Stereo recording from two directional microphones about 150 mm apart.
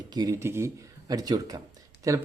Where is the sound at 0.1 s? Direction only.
25° right (ahead or behind).